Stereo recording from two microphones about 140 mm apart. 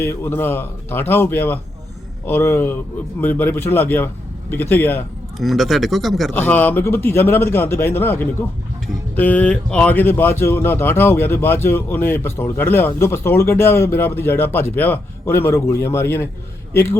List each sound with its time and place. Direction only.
0.0 s speech: 15° left (ahead or behind)
5.4 s speech: centre (ahead or behind)
6.3 s speech: 10° left (ahead or behind)